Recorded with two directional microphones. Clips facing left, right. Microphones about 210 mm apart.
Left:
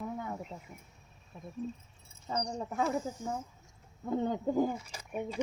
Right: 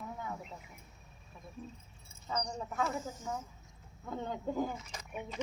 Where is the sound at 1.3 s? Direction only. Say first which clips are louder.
Left 8 dB; 25° left (ahead or behind).